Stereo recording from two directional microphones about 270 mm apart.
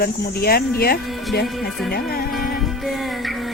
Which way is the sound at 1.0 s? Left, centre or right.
Centre.